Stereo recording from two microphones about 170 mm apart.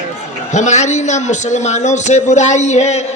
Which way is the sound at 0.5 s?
45° left (ahead or behind).